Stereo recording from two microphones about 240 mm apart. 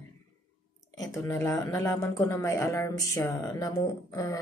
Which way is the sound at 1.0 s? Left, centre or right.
Centre.